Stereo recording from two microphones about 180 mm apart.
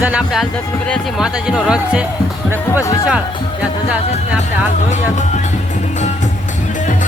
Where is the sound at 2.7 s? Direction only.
15° left (ahead or behind).